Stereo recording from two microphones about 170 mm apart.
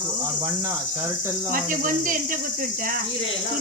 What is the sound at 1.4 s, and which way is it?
Speech, 55° right (ahead or behind).